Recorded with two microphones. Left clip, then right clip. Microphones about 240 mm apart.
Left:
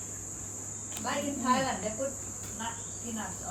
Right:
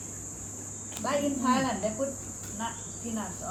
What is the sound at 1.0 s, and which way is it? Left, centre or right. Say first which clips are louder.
Speech: right 5 dB; right.